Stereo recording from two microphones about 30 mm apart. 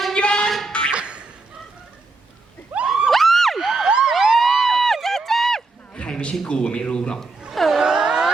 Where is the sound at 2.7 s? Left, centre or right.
Right.